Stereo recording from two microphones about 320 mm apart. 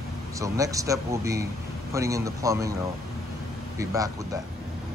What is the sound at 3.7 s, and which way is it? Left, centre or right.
Speech, centre.